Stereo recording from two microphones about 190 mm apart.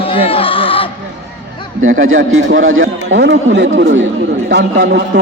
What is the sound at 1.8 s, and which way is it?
A man's voice, 90° right.